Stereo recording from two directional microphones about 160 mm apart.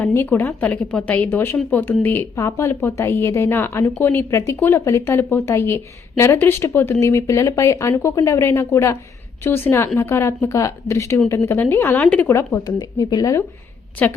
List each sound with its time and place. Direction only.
0.0 s speech: 10° left (ahead or behind)
14.0 s speech: 10° left (ahead or behind)